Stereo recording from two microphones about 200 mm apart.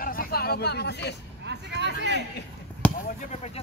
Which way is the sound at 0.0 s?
45° left (ahead or behind).